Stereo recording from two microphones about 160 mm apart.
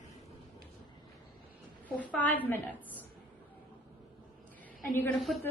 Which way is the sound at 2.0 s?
10° left (ahead or behind).